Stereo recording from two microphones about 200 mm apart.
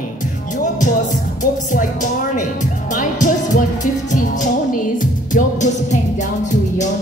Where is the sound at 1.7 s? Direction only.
40° left (ahead or behind).